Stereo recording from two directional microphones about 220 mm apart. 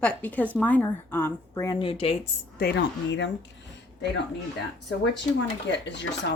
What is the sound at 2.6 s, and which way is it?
Speech, 50° left (ahead or behind).